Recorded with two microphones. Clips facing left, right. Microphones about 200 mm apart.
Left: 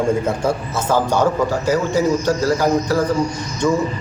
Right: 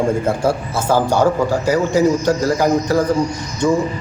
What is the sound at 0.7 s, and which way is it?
A man's voice, 10° right (ahead or behind).